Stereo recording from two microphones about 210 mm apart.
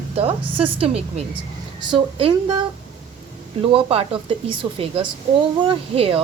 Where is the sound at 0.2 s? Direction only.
25° right (ahead or behind).